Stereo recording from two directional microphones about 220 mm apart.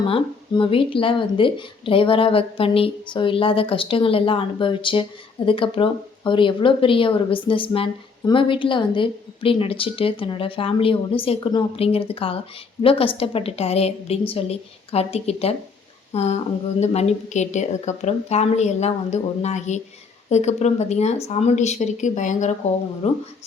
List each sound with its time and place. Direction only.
0.1 s a woman's voice: 25° left (ahead or behind)